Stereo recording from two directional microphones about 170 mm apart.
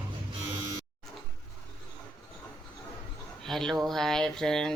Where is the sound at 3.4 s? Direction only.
Centre (ahead or behind).